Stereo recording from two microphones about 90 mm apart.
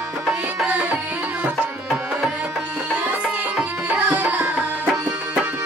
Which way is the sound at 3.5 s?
10° right (ahead or behind).